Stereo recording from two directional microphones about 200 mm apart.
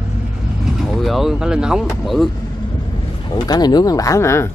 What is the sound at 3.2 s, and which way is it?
Speech, 20° left (ahead or behind).